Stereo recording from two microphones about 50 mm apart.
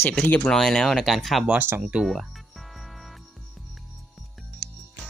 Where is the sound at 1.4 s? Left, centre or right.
Right.